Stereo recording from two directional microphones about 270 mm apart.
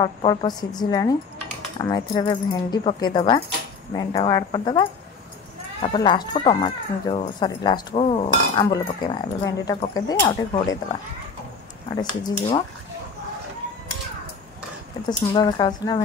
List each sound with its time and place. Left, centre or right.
0.0 s speech: centre
15.0 s speech: centre